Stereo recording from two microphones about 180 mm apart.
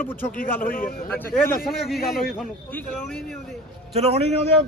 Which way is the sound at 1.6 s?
Centre (ahead or behind).